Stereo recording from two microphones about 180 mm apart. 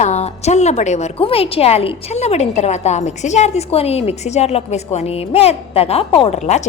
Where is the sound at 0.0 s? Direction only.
40° left (ahead or behind).